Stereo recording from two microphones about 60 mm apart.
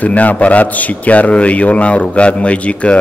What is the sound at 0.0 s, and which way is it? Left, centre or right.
Speech, left.